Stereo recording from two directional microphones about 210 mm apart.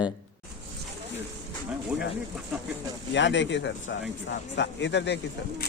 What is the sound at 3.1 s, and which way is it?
Speech, 60° left (ahead or behind).